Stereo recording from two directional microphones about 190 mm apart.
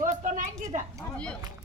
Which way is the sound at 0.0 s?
40° right (ahead or behind).